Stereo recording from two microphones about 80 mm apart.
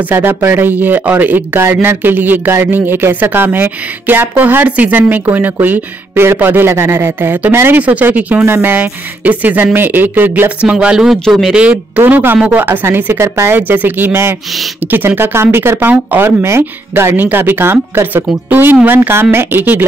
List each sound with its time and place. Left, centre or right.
0.1 s speech: right; by 11.1 s centre
11.2 s speech: centre
11.5 s speech: centre
12.0 s speech: right
16.3 s speech: right